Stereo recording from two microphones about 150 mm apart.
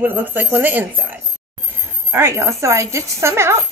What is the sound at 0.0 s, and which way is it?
Speech, 10° right (ahead or behind).